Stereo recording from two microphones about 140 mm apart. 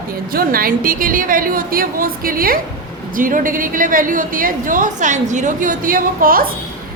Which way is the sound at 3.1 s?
75° right (ahead or behind).